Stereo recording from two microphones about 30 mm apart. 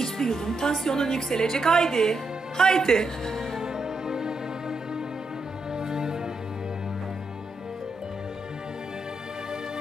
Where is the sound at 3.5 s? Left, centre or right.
Right.